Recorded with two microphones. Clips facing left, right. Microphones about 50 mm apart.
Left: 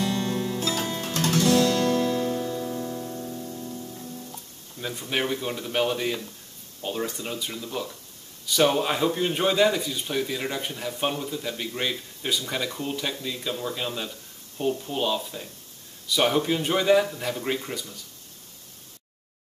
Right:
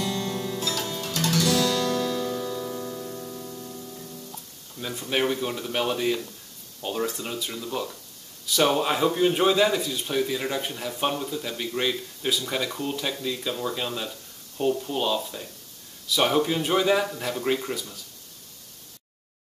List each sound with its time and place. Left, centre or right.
0.0 s guitar: left
2.7 s music: centre
3.2 s music: centre
4.7 s speech: centre